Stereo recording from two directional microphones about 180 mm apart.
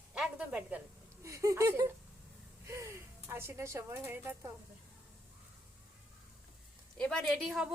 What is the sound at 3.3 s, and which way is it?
A woman's voice, 15° right (ahead or behind).